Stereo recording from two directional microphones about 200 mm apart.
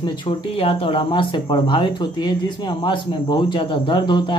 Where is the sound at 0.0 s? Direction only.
25° left (ahead or behind).